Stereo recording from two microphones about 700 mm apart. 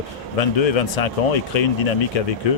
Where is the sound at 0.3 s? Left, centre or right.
Left.